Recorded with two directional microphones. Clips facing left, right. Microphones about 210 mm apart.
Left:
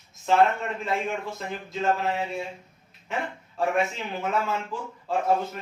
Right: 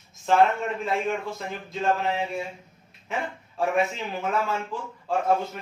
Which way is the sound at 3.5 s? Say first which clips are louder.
Right 1 dB; centre (ahead or behind).